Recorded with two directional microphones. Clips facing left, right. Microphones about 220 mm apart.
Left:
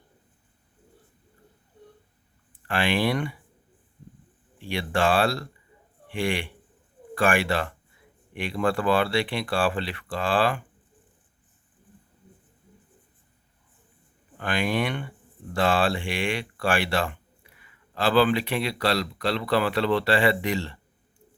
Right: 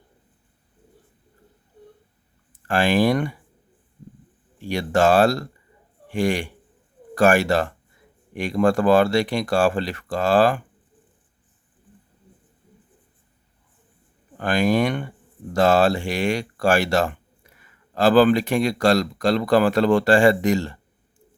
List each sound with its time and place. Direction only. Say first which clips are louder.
2.6 s speech: right 6 dB; 45° right (ahead or behind)
4.5 s a man's voice: right 6 dB; 45° right (ahead or behind)
14.3 s speech: right 6 dB; 40° right (ahead or behind)